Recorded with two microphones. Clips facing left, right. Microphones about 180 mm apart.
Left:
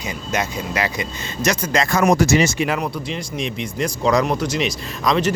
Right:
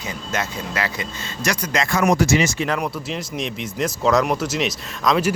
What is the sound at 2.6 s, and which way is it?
Speech, 10° left (ahead or behind).